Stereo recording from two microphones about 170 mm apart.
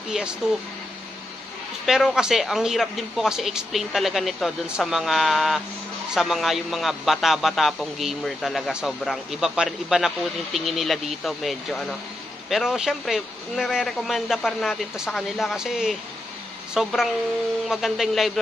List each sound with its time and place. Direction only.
0.1 s a man's voice: 5° right (ahead or behind)
1.9 s a man's voice: 5° right (ahead or behind)